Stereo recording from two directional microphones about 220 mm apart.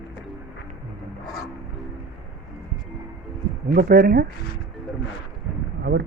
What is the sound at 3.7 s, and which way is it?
Speech, 40° right (ahead or behind).